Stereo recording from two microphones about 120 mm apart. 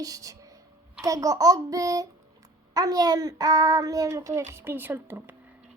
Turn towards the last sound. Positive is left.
turn(degrees=-20)  # may be behind; listen again after turning